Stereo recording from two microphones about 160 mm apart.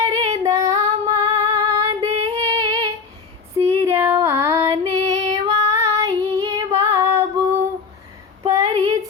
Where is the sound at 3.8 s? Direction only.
15° right (ahead or behind).